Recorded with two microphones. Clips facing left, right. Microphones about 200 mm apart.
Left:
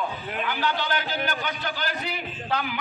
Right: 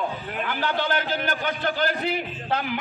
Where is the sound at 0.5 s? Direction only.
50° right (ahead or behind).